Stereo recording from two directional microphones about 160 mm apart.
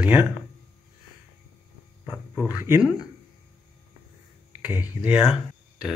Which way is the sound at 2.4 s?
10° right (ahead or behind).